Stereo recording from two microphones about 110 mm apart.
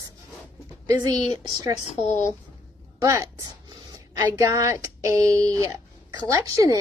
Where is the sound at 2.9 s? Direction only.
30° right (ahead or behind).